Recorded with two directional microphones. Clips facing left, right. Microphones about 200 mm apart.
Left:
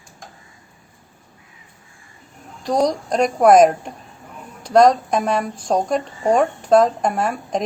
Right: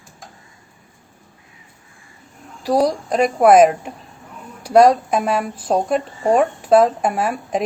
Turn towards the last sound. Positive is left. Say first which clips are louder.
# right 1 dB
turn(degrees=-5)  # may be behind; listen again after turning